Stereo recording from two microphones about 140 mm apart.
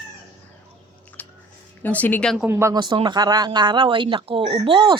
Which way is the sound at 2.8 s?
35° right (ahead or behind).